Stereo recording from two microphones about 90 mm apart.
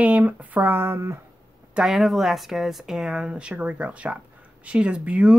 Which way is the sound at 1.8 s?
5° right (ahead or behind).